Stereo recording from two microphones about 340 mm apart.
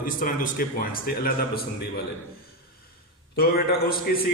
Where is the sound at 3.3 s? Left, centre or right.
Left.